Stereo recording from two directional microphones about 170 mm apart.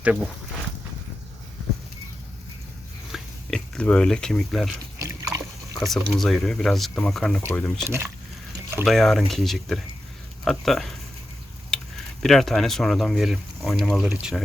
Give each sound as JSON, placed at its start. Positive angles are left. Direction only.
{"t": 0.0, "sound": "speech", "side_deg": -5}
{"t": 3.1, "sound": "speech", "side_deg": 5}
{"t": 4.9, "sound": "dog", "side_deg": -20}
{"t": 5.8, "sound": "speech", "side_deg": 0}
{"t": 7.9, "sound": "speech", "side_deg": -15}
{"t": 8.8, "sound": "speech", "side_deg": 0}
{"t": 11.7, "sound": "typing", "side_deg": 5}
{"t": 12.2, "sound": "speech", "side_deg": 0}